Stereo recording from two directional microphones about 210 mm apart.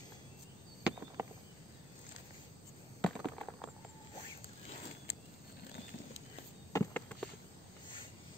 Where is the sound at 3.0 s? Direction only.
5° left (ahead or behind).